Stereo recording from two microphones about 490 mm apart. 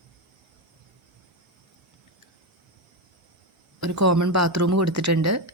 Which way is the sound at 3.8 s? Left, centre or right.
Right.